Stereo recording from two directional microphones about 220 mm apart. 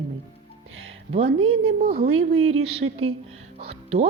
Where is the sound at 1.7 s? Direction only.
40° right (ahead or behind).